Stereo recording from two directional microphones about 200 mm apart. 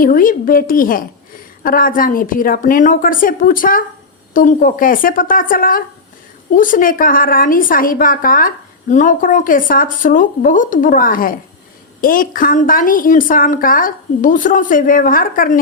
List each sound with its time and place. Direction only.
0.0 s a woman's voice: 45° left (ahead or behind)